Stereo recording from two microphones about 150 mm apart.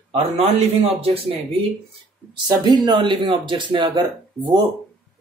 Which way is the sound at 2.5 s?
30° right (ahead or behind).